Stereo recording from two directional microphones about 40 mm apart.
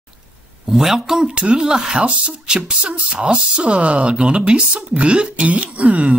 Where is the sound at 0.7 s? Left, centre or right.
Centre.